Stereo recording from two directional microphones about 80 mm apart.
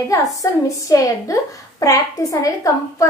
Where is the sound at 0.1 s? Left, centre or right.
Left.